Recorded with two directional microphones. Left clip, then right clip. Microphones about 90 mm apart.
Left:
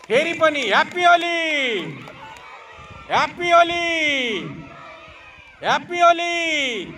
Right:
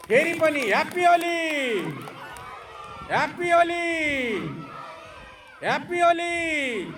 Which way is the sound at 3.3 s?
30° left (ahead or behind).